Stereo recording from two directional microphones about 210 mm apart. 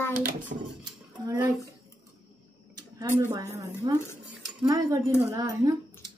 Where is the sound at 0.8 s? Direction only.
15° right (ahead or behind).